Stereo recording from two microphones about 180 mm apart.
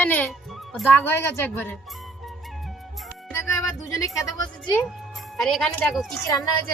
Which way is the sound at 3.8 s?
20° left (ahead or behind).